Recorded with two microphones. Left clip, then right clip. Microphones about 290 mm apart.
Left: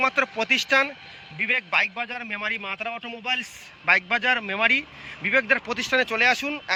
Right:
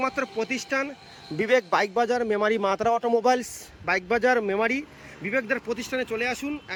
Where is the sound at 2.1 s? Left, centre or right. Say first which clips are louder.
Right 5 dB; centre.